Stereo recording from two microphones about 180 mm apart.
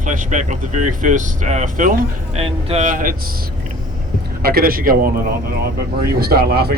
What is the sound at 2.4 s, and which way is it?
Speech, 35° right (ahead or behind).